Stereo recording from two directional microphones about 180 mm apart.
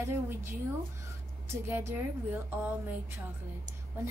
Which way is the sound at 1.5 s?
15° right (ahead or behind).